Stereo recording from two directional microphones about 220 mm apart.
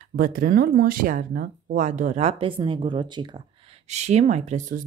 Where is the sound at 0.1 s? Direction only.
40° right (ahead or behind).